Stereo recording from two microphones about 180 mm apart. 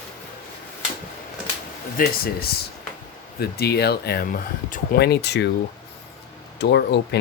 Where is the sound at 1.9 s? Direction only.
55° left (ahead or behind).